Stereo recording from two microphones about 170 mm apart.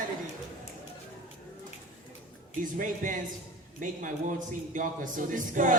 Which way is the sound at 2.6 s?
50° right (ahead or behind).